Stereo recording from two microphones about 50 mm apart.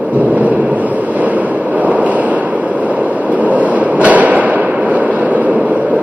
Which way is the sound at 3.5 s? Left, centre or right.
Right.